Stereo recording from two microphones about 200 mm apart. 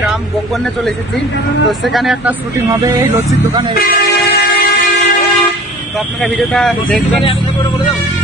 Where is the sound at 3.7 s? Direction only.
50° left (ahead or behind).